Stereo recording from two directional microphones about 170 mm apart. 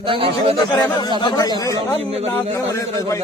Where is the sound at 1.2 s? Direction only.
25° left (ahead or behind).